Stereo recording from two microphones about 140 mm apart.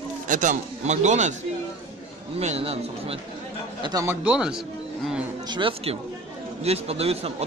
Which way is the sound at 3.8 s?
25° right (ahead or behind).